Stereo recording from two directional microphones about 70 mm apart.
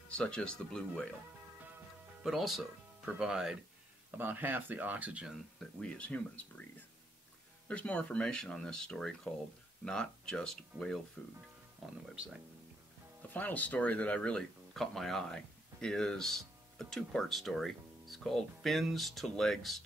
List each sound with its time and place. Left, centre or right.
0.1 s speech: centre
2.2 s speech: centre
4.2 s speech: right
5.8 s speech: centre
7.6 s speech: centre
11.8 s speech: centre
13.3 s speech: left
14.7 s speech: centre